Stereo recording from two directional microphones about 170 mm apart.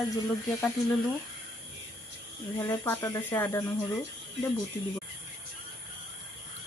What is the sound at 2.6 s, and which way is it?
Speech, 10° left (ahead or behind).